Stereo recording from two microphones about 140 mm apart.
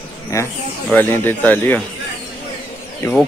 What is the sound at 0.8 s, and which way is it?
Speech, 15° left (ahead or behind).